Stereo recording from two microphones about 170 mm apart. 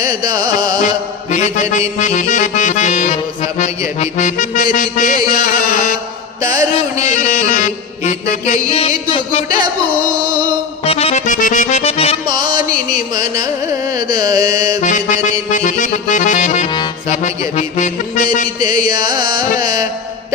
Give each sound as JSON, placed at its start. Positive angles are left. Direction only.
{"t": 0.0, "sound": "carnatic music", "side_deg": -25}
{"t": 1.3, "sound": "mantra", "side_deg": 45}
{"t": 2.0, "sound": "music", "side_deg": 45}
{"t": 6.5, "sound": "carnatic music", "side_deg": -20}
{"t": 7.0, "sound": "music", "side_deg": 45}
{"t": 8.7, "sound": "a sound", "side_deg": 35}
{"t": 10.8, "sound": "accordion", "side_deg": 35}
{"t": 12.2, "sound": "music", "side_deg": -25}
{"t": 13.1, "sound": "carnatic music", "side_deg": -20}
{"t": 14.8, "sound": "music", "side_deg": 50}
{"t": 16.6, "sound": "music", "side_deg": 25}
{"t": 17.1, "sound": "music", "side_deg": 40}
{"t": 18.6, "sound": "carnatic music", "side_deg": -25}